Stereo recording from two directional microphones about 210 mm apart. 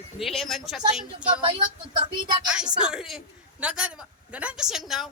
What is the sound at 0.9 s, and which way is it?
Speech, 25° right (ahead or behind).